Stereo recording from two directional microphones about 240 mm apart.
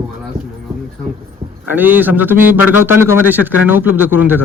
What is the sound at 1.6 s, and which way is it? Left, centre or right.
Speech, centre.